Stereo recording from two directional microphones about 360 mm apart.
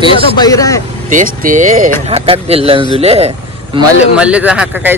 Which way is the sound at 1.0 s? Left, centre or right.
Right.